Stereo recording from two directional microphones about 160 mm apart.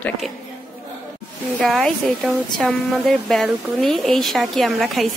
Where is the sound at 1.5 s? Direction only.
5° left (ahead or behind).